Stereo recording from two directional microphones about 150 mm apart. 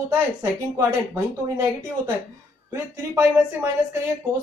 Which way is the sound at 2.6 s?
20° right (ahead or behind).